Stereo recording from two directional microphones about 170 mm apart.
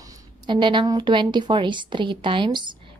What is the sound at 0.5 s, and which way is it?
A woman's voice, 30° right (ahead or behind).